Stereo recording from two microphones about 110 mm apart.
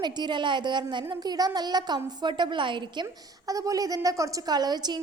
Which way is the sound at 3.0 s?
30° right (ahead or behind).